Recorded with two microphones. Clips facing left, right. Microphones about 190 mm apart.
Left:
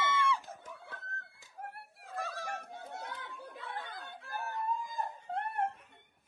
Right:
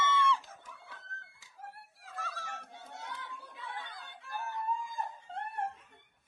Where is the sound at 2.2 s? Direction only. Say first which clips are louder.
Left 4 dB; 15° left (ahead or behind).